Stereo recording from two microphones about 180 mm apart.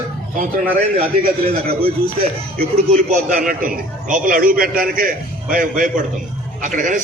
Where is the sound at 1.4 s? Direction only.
35° right (ahead or behind).